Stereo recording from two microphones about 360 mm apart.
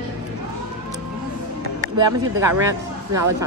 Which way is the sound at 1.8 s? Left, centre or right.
Centre.